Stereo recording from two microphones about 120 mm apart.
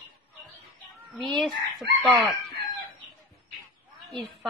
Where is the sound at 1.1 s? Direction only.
Centre (ahead or behind).